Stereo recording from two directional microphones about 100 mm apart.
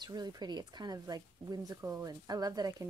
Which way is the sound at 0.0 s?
45° right (ahead or behind).